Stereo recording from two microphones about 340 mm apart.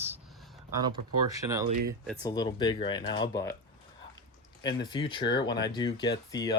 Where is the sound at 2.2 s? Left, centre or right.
Centre.